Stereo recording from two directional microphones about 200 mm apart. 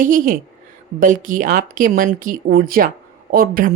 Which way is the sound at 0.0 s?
40° right (ahead or behind).